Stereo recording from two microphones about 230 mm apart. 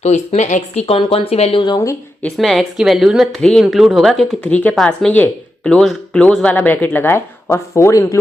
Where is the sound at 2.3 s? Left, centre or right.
Centre.